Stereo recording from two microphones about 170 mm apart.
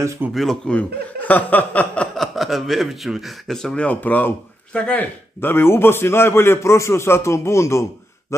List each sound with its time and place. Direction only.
0.0 s speech: 15° right (ahead or behind)
0.3 s a man's voice: centre (ahead or behind)
8.3 s a sound: 15° left (ahead or behind)